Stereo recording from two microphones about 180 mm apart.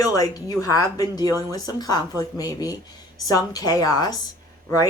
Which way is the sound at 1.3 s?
15° right (ahead or behind).